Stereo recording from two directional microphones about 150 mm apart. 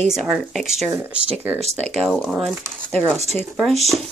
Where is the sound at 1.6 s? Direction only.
45° right (ahead or behind).